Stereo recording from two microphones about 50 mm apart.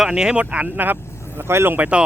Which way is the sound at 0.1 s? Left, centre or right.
Centre.